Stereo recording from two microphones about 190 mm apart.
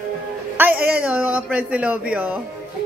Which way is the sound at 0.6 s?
10° right (ahead or behind).